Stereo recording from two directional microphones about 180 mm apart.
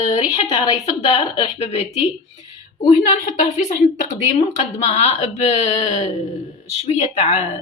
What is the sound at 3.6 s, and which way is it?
Speech, 40° left (ahead or behind).